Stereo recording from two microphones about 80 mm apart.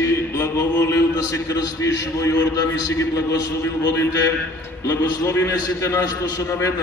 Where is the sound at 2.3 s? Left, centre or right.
Left.